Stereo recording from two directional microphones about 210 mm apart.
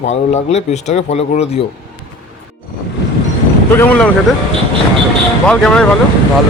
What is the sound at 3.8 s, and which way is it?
Speech, 5° left (ahead or behind).